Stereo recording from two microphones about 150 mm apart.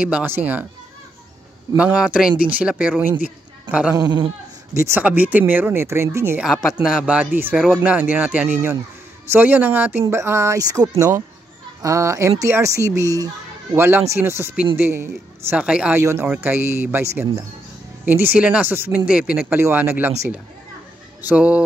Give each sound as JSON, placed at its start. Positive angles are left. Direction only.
{"t": 0.0, "sound": "speech", "side_deg": -10}
{"t": 1.8, "sound": "a woman's voice", "side_deg": -10}
{"t": 3.9, "sound": "speech", "side_deg": -25}
{"t": 6.8, "sound": "speech", "side_deg": -5}
{"t": 16.0, "sound": "speech", "side_deg": -15}